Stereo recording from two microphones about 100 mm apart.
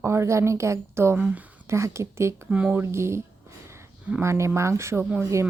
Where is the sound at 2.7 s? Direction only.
25° right (ahead or behind).